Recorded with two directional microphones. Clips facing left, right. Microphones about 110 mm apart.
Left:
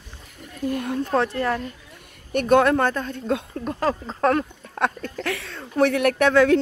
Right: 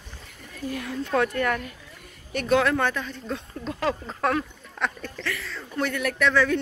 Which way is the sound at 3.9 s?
25° left (ahead or behind).